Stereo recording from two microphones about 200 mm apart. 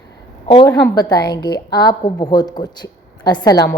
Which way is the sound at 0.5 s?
20° left (ahead or behind).